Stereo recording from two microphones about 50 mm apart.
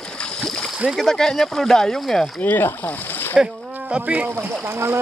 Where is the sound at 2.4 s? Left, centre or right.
Left.